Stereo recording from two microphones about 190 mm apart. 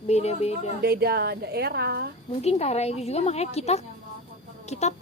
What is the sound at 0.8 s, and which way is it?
A woman's voice, 55° right (ahead or behind).